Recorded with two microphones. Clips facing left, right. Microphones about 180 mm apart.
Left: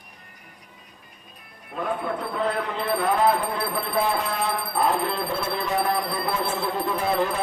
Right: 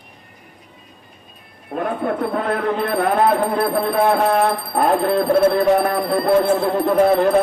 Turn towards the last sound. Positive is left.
turn(degrees=-55)  # may be behind; listen again after turning